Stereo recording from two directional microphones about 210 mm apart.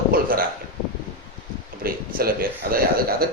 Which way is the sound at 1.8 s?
45° right (ahead or behind).